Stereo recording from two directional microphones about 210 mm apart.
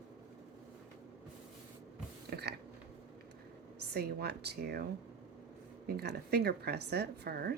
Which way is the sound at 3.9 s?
50° right (ahead or behind).